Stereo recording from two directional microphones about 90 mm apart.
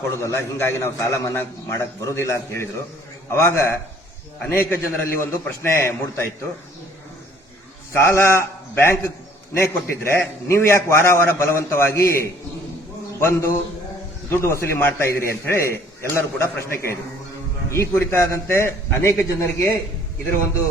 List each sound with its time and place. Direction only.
0.2 s a man's voice: 30° left (ahead or behind)
7.9 s a man's voice: 25° left (ahead or behind)